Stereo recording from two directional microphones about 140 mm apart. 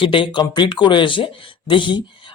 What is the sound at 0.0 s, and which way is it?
Speech, 35° left (ahead or behind).